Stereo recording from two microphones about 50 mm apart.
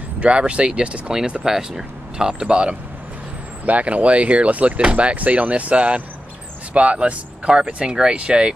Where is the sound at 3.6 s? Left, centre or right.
Right.